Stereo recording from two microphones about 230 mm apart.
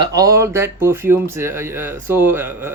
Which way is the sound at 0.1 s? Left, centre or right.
Centre.